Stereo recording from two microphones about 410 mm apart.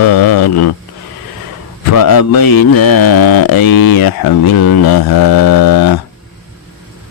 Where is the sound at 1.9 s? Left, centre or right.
Left.